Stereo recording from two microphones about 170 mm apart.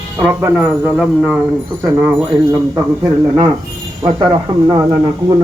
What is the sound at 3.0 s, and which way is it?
Speech, 25° right (ahead or behind).